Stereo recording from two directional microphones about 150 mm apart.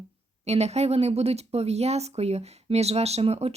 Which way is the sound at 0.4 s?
45° right (ahead or behind).